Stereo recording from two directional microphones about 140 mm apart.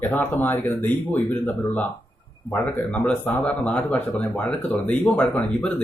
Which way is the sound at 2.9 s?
10° left (ahead or behind).